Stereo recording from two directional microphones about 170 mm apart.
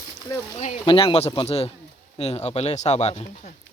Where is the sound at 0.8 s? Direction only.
30° left (ahead or behind).